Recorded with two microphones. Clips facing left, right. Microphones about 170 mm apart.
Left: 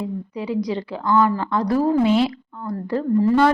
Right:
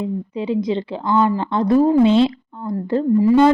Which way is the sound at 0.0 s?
25° right (ahead or behind).